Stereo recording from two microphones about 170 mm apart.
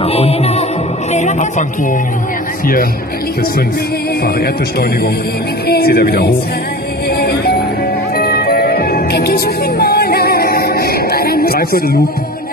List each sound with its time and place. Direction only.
0.0 s music: 35° left (ahead or behind)
1.1 s a sound: 45° left (ahead or behind)
2.6 s speech: 55° left (ahead or behind)
4.4 s speech: 70° left (ahead or behind)
7.2 s music: 70° left (ahead or behind)